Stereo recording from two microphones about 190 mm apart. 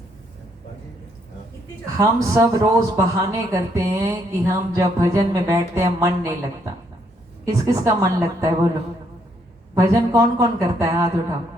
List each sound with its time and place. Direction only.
2.0 s speech: 15° right (ahead or behind)
7.4 s speech: 15° right (ahead or behind)
9.7 s speech: 15° right (ahead or behind)